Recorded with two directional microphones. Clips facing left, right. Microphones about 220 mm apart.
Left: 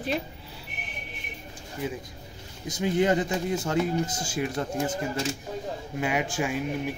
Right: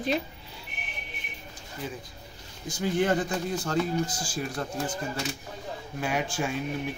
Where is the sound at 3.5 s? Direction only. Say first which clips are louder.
Left 1 dB; 20° left (ahead or behind).